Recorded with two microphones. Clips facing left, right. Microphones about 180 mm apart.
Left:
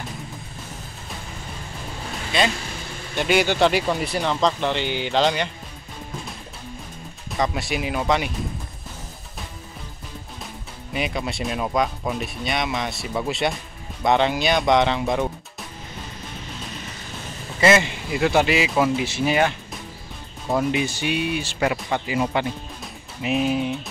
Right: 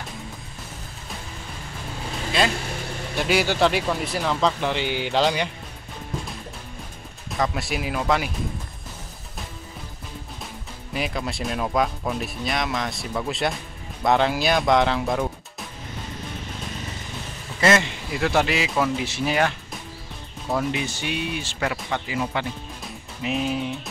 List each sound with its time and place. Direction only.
3.2 s speech: centre (ahead or behind)
7.3 s speech: centre (ahead or behind)
10.9 s speech: centre (ahead or behind)
17.6 s speech: 5° left (ahead or behind)
20.4 s speech: 15° left (ahead or behind)
23.2 s speech: 5° left (ahead or behind)